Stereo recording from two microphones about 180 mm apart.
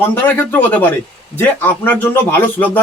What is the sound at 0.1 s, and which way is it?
A man's voice, 10° left (ahead or behind).